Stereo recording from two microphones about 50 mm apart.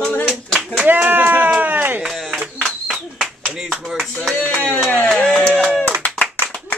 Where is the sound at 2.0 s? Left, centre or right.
Centre.